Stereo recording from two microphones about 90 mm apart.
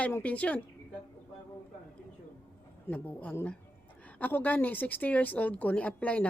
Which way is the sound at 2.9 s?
20° left (ahead or behind).